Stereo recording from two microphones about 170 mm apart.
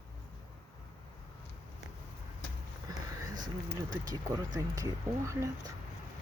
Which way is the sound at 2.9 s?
25° right (ahead or behind).